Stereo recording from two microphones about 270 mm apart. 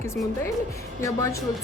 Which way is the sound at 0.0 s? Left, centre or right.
Centre.